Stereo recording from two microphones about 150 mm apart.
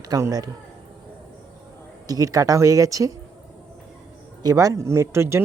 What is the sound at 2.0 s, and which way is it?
Speech, 25° right (ahead or behind).